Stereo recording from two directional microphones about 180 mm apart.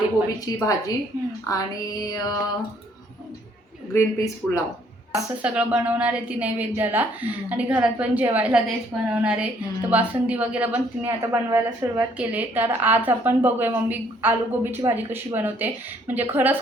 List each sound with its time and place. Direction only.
0.4 s music: 20° left (ahead or behind)
3.9 s speech: 15° left (ahead or behind)
5.4 s a woman's voice: 5° right (ahead or behind)